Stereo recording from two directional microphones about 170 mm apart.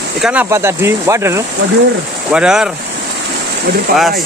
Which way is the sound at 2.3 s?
5° right (ahead or behind).